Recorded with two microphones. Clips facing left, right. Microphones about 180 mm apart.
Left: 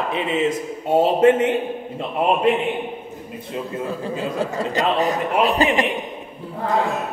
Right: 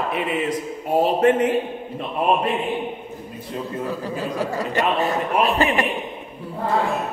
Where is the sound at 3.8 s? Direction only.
25° left (ahead or behind).